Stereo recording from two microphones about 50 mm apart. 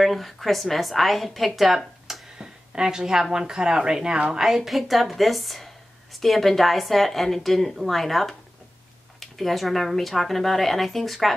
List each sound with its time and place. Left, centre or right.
0.0 s a woman's voice: centre
2.3 s a woman's voice: centre